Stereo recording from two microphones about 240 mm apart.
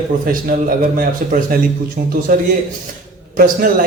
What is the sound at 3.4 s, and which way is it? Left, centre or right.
Speech, right.